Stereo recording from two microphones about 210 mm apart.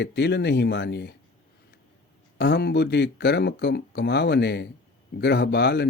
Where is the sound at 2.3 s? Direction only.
50° left (ahead or behind).